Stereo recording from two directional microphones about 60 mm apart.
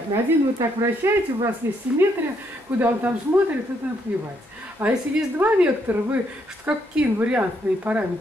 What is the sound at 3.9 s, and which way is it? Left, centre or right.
A woman's voice, right.